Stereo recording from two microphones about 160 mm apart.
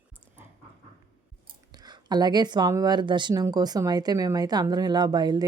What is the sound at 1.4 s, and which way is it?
Speech, 25° right (ahead or behind).